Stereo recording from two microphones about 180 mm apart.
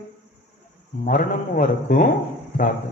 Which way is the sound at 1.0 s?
50° left (ahead or behind).